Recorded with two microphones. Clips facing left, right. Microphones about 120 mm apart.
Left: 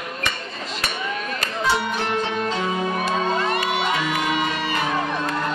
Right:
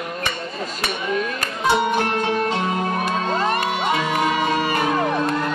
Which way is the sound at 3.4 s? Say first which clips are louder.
Right 1 dB; 45° right (ahead or behind).